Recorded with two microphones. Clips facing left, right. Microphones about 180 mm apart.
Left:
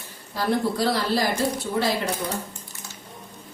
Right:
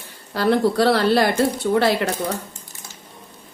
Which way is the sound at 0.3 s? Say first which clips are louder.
Right 6 dB; 70° right (ahead or behind).